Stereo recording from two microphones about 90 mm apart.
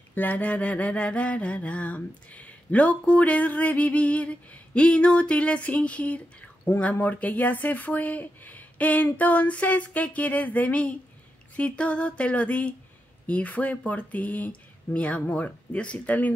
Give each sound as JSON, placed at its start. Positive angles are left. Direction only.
{"t": 0.1, "sound": "mantra", "side_deg": 20}